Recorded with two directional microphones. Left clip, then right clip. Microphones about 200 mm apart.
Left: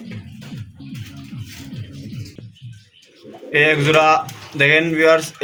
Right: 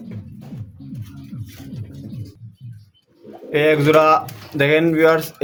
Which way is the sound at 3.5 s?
55° right (ahead or behind).